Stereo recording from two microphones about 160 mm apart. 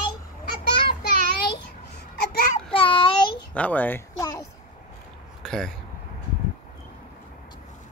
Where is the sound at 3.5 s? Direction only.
10° left (ahead or behind).